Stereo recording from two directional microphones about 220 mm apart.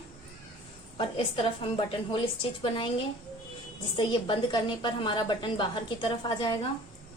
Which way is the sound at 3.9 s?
20° left (ahead or behind).